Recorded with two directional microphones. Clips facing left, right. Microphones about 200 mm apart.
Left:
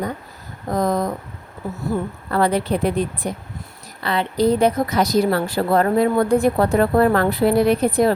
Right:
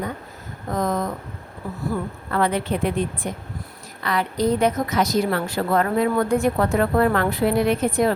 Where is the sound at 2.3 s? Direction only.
35° left (ahead or behind).